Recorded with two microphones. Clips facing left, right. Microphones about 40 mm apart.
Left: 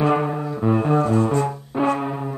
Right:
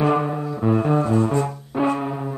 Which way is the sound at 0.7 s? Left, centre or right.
Centre.